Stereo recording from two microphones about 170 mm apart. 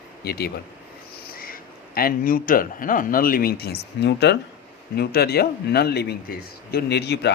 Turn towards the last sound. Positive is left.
turn(degrees=75)  # may be behind; listen again after turning